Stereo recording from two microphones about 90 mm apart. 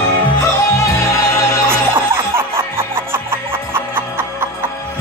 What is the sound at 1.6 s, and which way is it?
Music, 30° right (ahead or behind).